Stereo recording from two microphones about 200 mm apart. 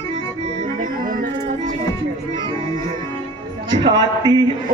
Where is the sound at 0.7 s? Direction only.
45° right (ahead or behind).